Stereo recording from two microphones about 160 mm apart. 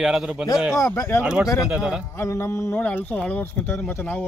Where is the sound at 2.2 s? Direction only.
15° left (ahead or behind).